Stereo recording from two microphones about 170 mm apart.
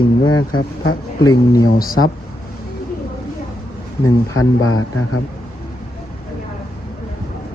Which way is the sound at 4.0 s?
20° left (ahead or behind).